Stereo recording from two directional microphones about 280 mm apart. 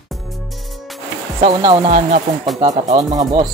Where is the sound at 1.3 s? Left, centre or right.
Centre.